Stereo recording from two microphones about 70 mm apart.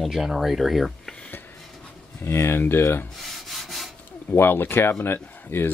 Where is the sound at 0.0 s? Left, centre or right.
Centre.